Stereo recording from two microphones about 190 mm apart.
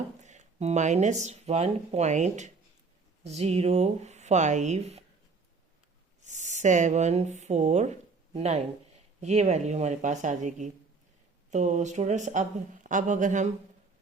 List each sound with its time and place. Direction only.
0.2 s speech: 40° right (ahead or behind)
6.2 s speech: 40° right (ahead or behind)